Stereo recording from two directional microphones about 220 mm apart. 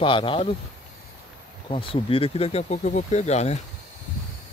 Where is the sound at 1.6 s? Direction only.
25° left (ahead or behind).